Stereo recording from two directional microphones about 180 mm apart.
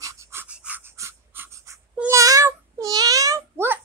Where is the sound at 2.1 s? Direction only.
20° right (ahead or behind).